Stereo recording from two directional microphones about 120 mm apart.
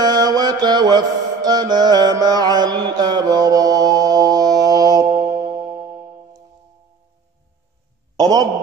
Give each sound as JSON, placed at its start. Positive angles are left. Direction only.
{"t": 0.0, "sound": "mantra", "side_deg": -35}
{"t": 8.2, "sound": "a man's voice", "side_deg": -30}